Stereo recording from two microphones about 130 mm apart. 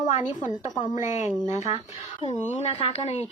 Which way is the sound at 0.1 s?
70° left (ahead or behind).